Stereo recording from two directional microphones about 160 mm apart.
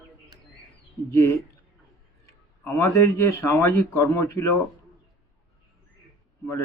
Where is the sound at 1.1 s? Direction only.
15° left (ahead or behind).